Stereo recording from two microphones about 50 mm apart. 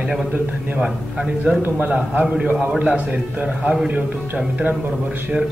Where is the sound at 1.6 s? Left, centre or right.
Right.